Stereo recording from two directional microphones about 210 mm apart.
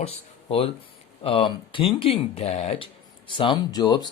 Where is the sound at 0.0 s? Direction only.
25° left (ahead or behind).